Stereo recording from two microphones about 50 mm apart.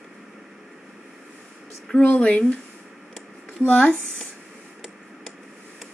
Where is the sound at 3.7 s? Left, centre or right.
Left.